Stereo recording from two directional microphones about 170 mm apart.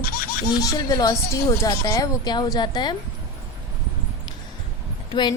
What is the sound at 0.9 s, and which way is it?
A woman's voice, 20° left (ahead or behind).